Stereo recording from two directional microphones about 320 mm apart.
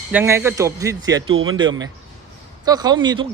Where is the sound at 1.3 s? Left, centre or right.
Right.